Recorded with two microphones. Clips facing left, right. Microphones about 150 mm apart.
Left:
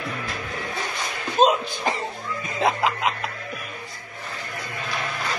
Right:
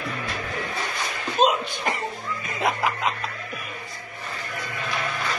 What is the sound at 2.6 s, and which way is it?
Music, 20° left (ahead or behind).